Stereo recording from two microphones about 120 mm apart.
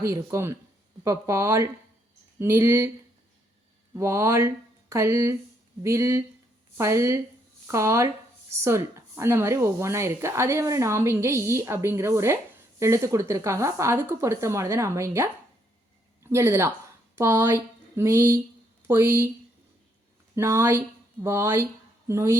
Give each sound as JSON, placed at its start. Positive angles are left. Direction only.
{"t": 0.0, "sound": "speech", "side_deg": -25}
{"t": 3.9, "sound": "speech", "side_deg": -25}
{"t": 20.3, "sound": "speech", "side_deg": -20}